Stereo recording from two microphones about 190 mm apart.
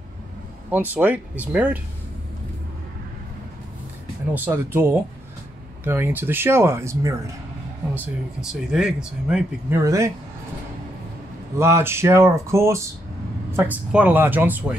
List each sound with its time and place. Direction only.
0.7 s speech: 10° right (ahead or behind)
4.3 s speech: 10° right (ahead or behind)
7.9 s speech: 5° right (ahead or behind)
9.8 s speech: 15° right (ahead or behind)
11.5 s speech: 15° right (ahead or behind)